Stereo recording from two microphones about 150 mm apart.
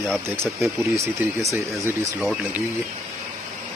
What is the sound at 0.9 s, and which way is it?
Speech, 20° right (ahead or behind).